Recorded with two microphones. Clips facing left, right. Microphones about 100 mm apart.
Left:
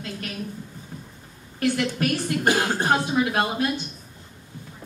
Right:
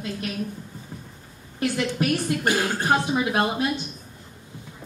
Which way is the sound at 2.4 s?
25° left (ahead or behind).